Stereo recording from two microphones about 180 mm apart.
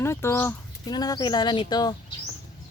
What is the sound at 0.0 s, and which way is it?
Speech, 15° left (ahead or behind).